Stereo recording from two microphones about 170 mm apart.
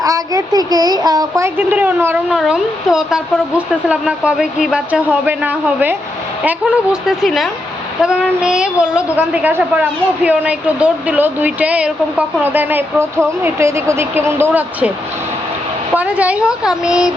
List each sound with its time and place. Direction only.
0.0 s a child's voice: 20° right (ahead or behind)
16.0 s speech: 10° right (ahead or behind)